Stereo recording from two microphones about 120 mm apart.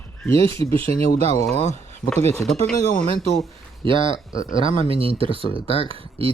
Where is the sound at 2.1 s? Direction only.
65° right (ahead or behind).